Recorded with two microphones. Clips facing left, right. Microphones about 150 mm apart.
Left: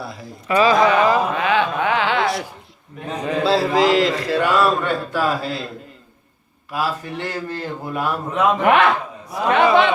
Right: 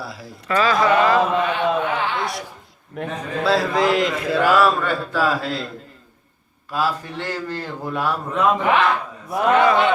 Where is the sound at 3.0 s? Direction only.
65° right (ahead or behind).